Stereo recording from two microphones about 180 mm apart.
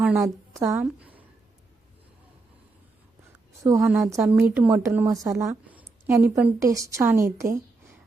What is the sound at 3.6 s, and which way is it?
A woman's voice, 15° right (ahead or behind).